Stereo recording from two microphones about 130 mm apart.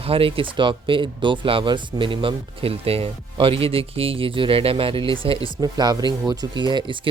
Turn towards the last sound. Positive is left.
turn(degrees=-35)  # may be behind; listen again after turning